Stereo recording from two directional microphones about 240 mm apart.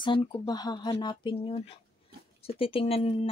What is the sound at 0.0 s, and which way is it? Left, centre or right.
Speech, centre.